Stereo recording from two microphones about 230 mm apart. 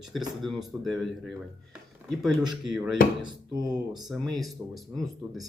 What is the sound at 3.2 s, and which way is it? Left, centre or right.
Speech, centre.